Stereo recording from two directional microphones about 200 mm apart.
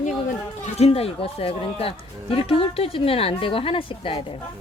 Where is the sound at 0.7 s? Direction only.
30° left (ahead or behind).